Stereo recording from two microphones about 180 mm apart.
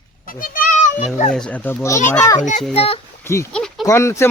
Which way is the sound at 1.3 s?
5° left (ahead or behind).